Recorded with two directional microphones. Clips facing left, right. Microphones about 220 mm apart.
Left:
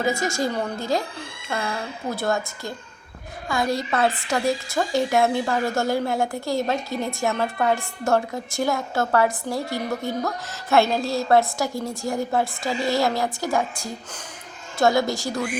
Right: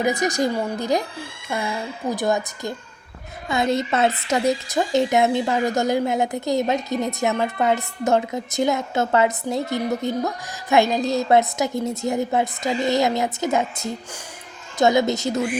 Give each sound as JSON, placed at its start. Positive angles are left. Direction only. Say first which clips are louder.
{"t": 0.0, "sound": "a woman's voice", "louder": "right 3 dB", "side_deg": -20}